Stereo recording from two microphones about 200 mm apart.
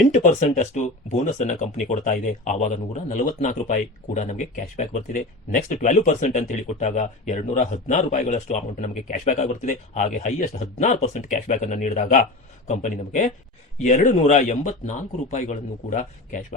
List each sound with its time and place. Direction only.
0.1 s speech: 35° left (ahead or behind)